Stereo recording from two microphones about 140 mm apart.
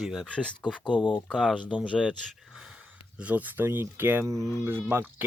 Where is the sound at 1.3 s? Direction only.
5° left (ahead or behind).